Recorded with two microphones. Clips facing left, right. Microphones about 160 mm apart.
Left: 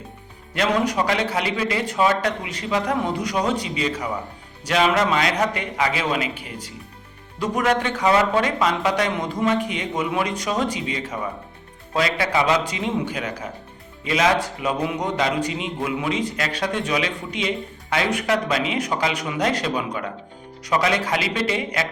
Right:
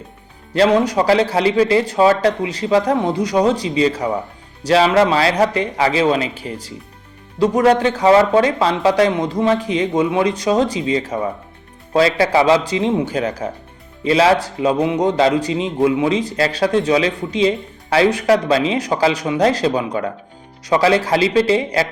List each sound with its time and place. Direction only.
0.5 s a man's voice: 30° right (ahead or behind)